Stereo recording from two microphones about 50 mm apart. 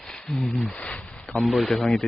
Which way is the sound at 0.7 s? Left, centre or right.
Left.